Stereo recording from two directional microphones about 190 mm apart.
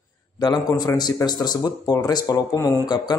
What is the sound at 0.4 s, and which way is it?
Speech, 20° left (ahead or behind).